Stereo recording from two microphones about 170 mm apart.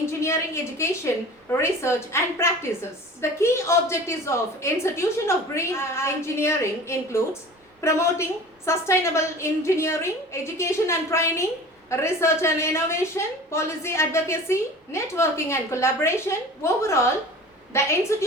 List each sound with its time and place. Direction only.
0.0 s a woman's voice: 15° left (ahead or behind)